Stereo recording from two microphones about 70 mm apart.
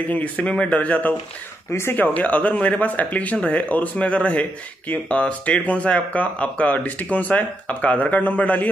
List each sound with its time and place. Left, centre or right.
0.1 s speech: centre
1.7 s speech: left
2.0 s speech: left